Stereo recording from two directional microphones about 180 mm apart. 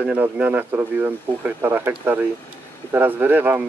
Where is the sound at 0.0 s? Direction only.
10° right (ahead or behind).